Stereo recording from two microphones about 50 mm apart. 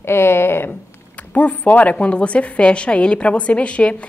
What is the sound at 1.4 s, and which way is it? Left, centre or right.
A woman's voice, left.